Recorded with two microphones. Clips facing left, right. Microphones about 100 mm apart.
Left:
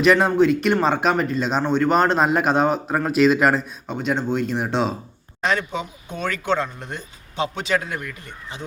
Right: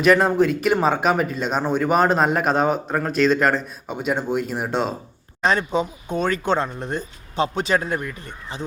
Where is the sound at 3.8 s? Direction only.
5° right (ahead or behind).